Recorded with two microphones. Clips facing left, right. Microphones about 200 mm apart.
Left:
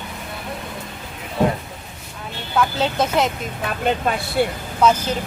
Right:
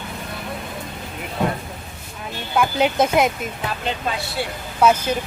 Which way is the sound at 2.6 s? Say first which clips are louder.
Right 2 dB; 10° right (ahead or behind).